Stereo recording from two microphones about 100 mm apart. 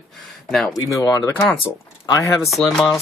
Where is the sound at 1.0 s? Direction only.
35° left (ahead or behind).